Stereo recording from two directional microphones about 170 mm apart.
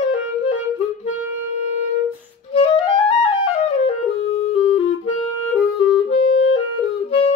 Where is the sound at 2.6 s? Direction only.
35° left (ahead or behind).